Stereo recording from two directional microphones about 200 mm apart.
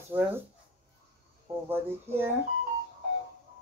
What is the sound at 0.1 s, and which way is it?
Speech, 25° right (ahead or behind).